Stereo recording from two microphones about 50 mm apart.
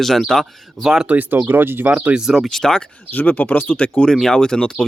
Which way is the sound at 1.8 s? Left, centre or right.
Right.